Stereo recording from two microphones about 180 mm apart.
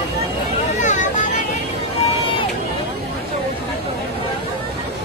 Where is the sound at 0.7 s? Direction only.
45° left (ahead or behind).